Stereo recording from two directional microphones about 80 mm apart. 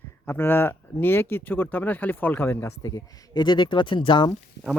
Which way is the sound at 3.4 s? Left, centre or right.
Left.